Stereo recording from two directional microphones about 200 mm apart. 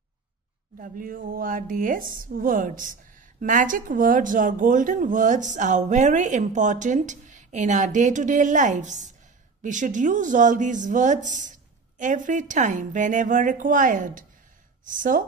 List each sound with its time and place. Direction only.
0.7 s a woman's voice: 45° right (ahead or behind)